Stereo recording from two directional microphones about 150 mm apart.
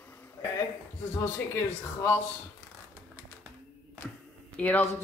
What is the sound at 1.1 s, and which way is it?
Speech, 15° left (ahead or behind).